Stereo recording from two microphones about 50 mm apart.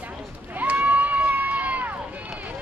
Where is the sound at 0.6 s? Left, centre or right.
Right.